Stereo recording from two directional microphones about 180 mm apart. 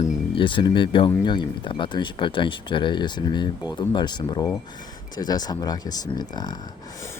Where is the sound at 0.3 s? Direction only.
25° left (ahead or behind).